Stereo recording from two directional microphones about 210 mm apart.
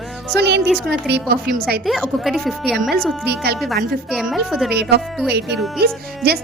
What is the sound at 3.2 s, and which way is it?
Speech, 50° right (ahead or behind).